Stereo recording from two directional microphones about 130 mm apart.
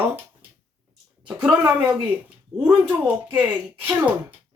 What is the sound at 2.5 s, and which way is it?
Speech, 5° left (ahead or behind).